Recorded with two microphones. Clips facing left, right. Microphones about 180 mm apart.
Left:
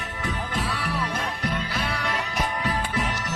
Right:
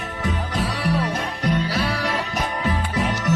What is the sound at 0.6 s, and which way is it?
Music, 30° right (ahead or behind).